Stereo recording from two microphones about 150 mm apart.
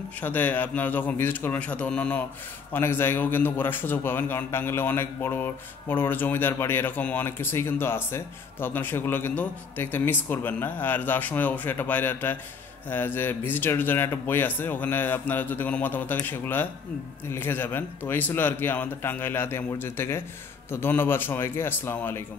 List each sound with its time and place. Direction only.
0.2 s a man's voice: 10° left (ahead or behind)